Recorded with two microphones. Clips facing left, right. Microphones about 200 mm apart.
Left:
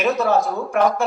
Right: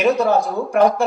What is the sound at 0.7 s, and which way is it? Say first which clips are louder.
Speech: right 4 dB; 35° right (ahead or behind).